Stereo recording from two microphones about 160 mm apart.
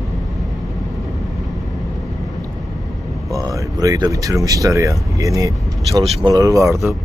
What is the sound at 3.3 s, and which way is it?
Speech, 20° right (ahead or behind).